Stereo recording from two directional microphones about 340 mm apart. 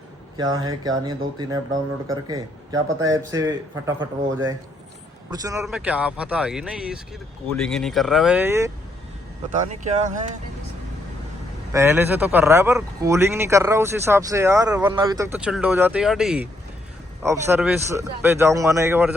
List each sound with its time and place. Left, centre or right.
0.3 s speech: centre
5.3 s speech: centre
9.6 s speech: right
11.7 s speech: centre